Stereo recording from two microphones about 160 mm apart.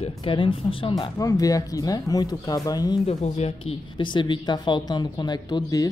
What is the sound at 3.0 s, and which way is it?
Speech, 40° left (ahead or behind).